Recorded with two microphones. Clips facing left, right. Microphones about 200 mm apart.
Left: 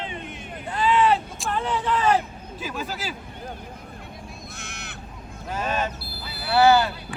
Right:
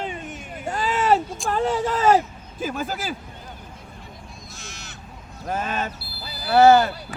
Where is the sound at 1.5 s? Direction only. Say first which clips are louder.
Right 3 dB; 45° right (ahead or behind).